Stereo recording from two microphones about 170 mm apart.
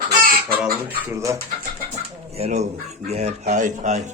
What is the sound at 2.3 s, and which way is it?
Speech, 40° right (ahead or behind).